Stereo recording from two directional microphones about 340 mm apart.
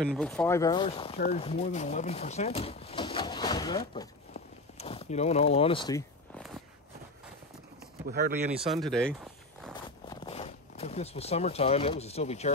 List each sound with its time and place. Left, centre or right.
0.0 s speech: centre
4.3 s a sound: centre
8.1 s speech: right
8.5 s speech: centre
9.8 s zipper: centre